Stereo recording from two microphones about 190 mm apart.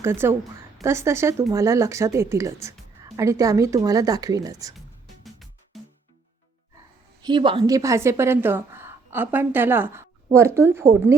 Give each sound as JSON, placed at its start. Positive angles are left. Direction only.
{"t": 0.0, "sound": "speech", "side_deg": -10}
{"t": 5.2, "sound": "music", "side_deg": 0}
{"t": 7.2, "sound": "speech", "side_deg": -25}